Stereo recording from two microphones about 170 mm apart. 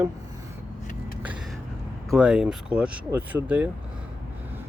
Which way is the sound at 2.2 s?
5° right (ahead or behind).